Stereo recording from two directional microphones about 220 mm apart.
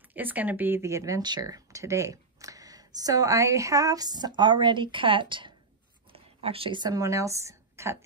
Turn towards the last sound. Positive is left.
turn(degrees=-10)  # may be behind; listen again after turning